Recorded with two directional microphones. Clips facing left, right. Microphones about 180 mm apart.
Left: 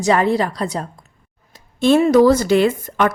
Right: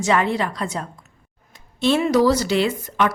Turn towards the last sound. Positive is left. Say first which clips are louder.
# left 4 dB
turn(degrees=50)  # may be behind; listen again after turning